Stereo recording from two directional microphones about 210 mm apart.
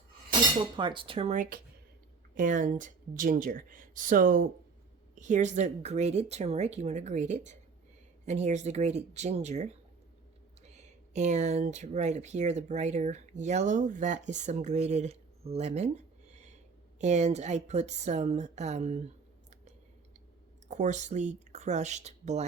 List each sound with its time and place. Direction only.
0.8 s speech: 25° right (ahead or behind)
20.7 s speech: 35° right (ahead or behind)